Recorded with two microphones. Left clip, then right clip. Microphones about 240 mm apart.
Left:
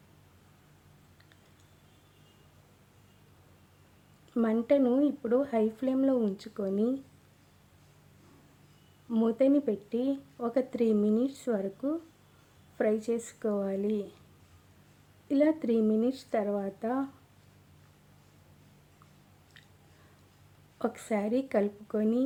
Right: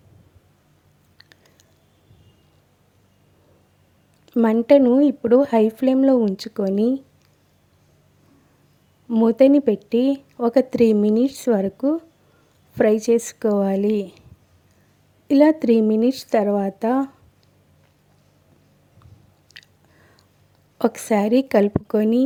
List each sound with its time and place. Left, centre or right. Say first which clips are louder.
4.3 s speech: right 12 dB; right
9.0 s speech: right 12 dB; right
15.3 s speech: right 12 dB; right
20.7 s speech: right 12 dB; right